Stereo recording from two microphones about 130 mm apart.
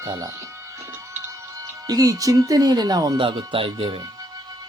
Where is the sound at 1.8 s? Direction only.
30° right (ahead or behind).